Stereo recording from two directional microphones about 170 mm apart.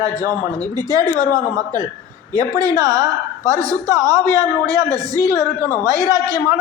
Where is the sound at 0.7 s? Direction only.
25° right (ahead or behind).